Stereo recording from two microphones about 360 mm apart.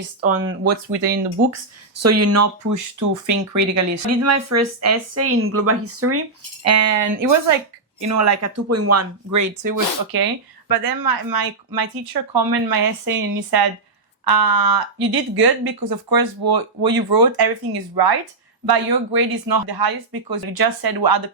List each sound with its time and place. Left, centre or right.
0.2 s speech: right
2.0 s speech: right
14.3 s speech: right
17.9 s a woman's voice: right